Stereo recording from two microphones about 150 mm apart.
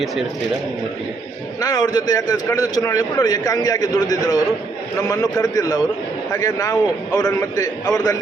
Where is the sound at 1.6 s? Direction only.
25° left (ahead or behind).